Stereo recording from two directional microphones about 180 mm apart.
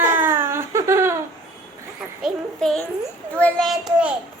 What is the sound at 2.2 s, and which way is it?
A child's voice, centre (ahead or behind).